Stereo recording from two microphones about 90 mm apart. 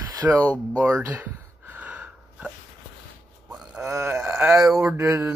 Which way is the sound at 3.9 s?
30° right (ahead or behind).